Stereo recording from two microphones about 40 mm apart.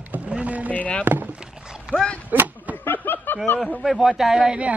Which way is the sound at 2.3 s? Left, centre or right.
Right.